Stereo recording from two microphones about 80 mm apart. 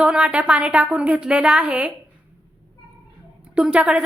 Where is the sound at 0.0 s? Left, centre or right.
Centre.